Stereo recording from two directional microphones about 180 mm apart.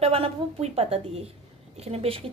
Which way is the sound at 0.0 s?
35° right (ahead or behind).